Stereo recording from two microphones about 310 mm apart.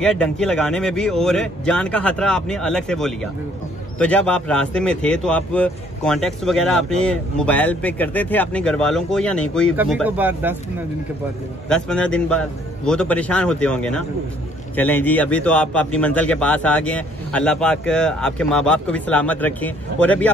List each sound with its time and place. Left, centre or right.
0.0 s speech: centre
11.7 s speech: centre